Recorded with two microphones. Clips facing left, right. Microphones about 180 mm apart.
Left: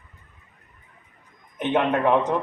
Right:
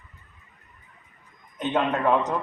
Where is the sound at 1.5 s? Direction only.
15° left (ahead or behind).